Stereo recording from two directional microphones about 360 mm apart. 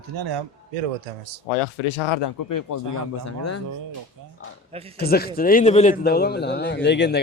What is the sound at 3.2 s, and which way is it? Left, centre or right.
Speech, left.